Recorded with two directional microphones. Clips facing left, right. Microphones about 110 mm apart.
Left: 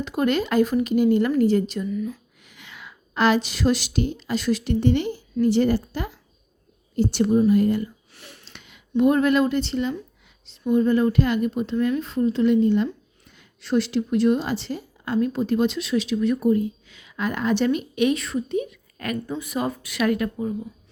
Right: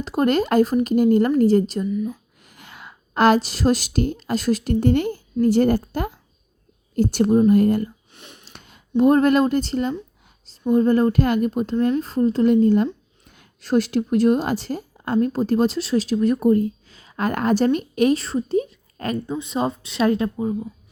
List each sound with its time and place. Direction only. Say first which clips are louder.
0.0 s a woman's voice: right 3 dB; 40° right (ahead or behind)
1.9 s speech: right 3 dB; 20° right (ahead or behind)
2.4 s a woman's voice: right 1 dB; 45° right (ahead or behind)
8.1 s a sound: right 1 dB; 20° right (ahead or behind)
8.5 s a woman's voice: right 2 dB; 45° right (ahead or behind); by 20.5 s 25° right (ahead or behind)